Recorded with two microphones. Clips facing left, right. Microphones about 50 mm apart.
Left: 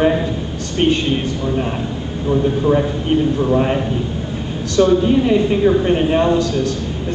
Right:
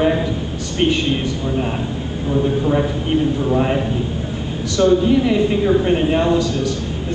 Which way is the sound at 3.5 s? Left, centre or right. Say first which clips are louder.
Even; centre.